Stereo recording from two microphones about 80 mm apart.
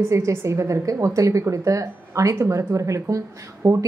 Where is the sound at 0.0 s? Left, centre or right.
Right.